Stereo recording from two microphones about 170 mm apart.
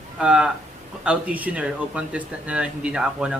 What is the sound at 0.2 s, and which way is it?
Speech, 5° right (ahead or behind).